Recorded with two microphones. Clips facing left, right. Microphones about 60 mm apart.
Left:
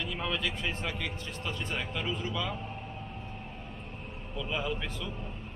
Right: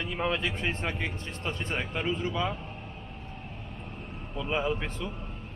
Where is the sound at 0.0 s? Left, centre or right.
Right.